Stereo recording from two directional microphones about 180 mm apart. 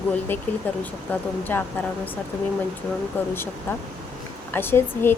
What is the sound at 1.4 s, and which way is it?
Speech, 10° left (ahead or behind).